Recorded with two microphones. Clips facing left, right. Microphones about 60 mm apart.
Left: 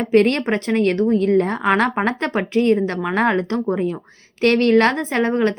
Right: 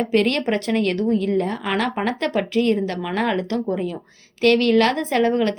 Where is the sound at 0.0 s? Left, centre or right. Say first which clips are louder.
Left 3 dB; left.